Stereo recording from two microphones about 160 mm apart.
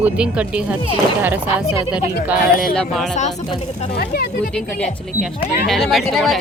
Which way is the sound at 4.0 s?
70° left (ahead or behind).